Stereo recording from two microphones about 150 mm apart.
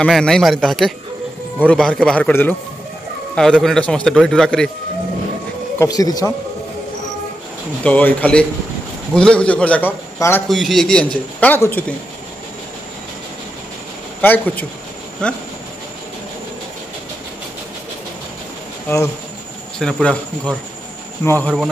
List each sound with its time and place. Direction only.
0.0 s a man's voice: 5° left (ahead or behind)
5.8 s speech: 25° left (ahead or behind)
7.8 s a man's voice: 10° left (ahead or behind)
10.5 s a man's voice: centre (ahead or behind)
14.2 s a man's voice: 10° left (ahead or behind)
19.8 s a man's voice: 5° left (ahead or behind)
21.2 s a man's voice: 10° left (ahead or behind)